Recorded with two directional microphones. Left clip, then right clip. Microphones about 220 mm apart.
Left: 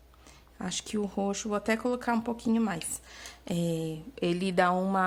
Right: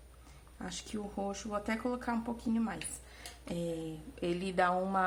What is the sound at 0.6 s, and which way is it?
Speech, 45° left (ahead or behind).